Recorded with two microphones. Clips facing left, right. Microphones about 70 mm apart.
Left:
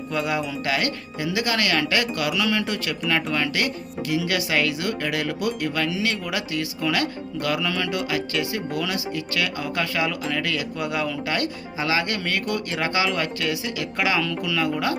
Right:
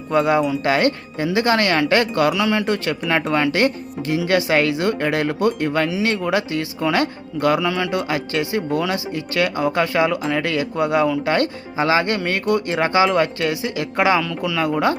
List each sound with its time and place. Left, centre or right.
0.1 s speech: right
11.3 s speech: right